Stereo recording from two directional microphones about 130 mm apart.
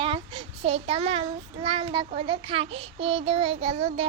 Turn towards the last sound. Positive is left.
turn(degrees=-50)  # may be behind; listen again after turning